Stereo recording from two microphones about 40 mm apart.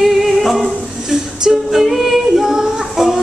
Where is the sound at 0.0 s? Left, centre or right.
Centre.